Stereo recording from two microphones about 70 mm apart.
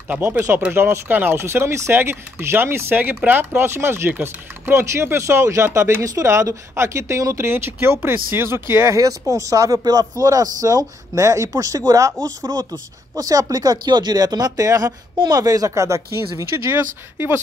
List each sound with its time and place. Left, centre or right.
0.1 s speech: right
6.0 s speech: right
9.3 s speech: right
15.2 s speech: right
16.7 s speech: right